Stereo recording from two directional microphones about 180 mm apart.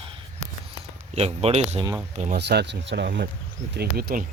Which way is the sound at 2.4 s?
70° right (ahead or behind).